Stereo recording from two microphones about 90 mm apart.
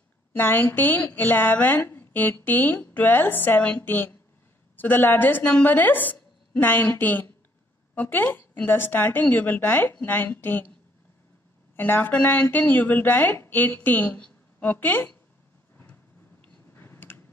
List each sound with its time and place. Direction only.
0.4 s speech: 20° left (ahead or behind)
11.7 s a woman's voice: 20° left (ahead or behind)
16.7 s a sound: 25° left (ahead or behind)